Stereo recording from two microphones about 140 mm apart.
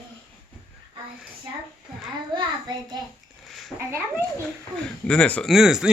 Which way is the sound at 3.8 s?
15° right (ahead or behind).